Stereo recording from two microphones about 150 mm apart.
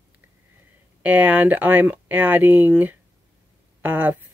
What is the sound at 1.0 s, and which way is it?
Speech, 10° right (ahead or behind).